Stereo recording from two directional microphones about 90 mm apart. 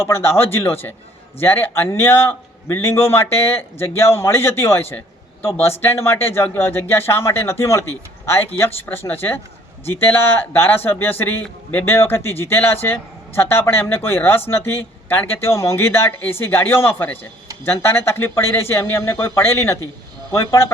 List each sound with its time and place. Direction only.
0.0 s speech: 25° left (ahead or behind)